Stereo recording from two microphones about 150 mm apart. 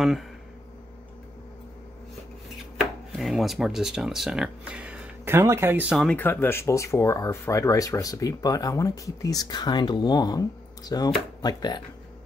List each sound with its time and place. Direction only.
2.8 s speech: centre (ahead or behind)
5.9 s speech: 10° left (ahead or behind); by 11.8 s 30° left (ahead or behind)